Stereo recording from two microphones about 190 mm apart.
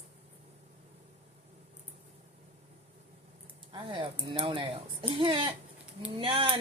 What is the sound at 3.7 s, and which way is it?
Speech, 25° right (ahead or behind).